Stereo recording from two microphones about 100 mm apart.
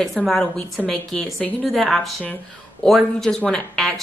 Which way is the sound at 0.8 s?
15° left (ahead or behind).